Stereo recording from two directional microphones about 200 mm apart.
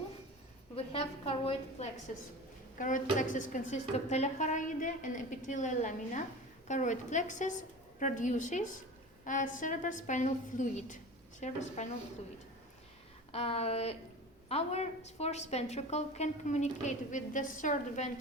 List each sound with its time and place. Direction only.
0.8 s a woman's voice: 30° left (ahead or behind)
2.7 s a woman's voice: 40° left (ahead or behind)
13.3 s a woman's voice: 30° left (ahead or behind)